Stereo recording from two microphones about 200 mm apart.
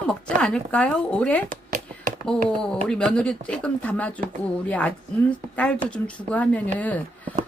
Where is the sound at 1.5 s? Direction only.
40° right (ahead or behind).